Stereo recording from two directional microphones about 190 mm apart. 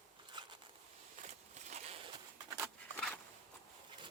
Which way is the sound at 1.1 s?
35° right (ahead or behind).